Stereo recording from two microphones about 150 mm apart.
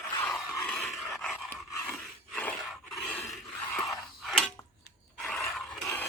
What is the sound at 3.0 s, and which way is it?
Filing, 10° left (ahead or behind).